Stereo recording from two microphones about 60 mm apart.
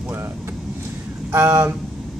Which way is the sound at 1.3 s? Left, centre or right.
Right.